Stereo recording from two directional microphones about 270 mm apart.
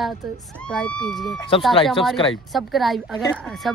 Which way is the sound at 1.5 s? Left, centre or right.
Centre.